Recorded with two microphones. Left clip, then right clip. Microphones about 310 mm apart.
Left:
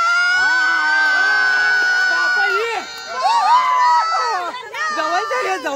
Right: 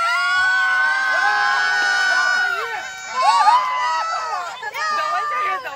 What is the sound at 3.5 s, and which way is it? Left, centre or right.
Crowd, left.